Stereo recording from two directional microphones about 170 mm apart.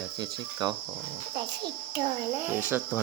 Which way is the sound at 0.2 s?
25° right (ahead or behind).